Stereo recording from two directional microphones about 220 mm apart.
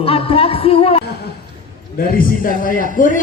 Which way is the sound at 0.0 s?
25° left (ahead or behind).